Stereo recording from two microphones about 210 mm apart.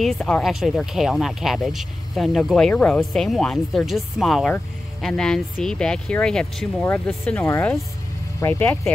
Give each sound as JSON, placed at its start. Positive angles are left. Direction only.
{"t": 0.0, "sound": "speech", "side_deg": 0}